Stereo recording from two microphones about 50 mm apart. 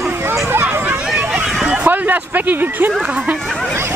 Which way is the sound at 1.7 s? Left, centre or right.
Right.